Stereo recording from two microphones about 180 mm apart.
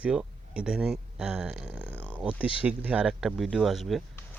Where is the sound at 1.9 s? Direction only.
10° left (ahead or behind).